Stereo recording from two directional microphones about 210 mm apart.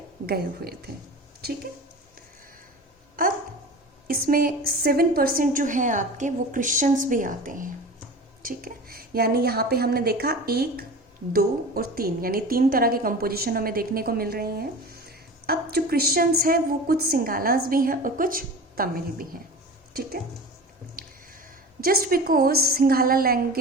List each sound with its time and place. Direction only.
0.3 s a woman's voice: 50° right (ahead or behind)
4.0 s a woman's voice: 45° right (ahead or behind)
21.0 s a sound: 45° right (ahead or behind)
21.8 s a woman's voice: 45° right (ahead or behind)